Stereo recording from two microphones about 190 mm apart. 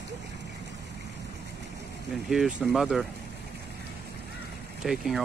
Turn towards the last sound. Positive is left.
turn(degrees=0)  # may be behind; listen again after turning